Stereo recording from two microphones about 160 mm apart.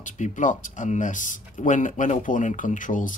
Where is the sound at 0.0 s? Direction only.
55° left (ahead or behind).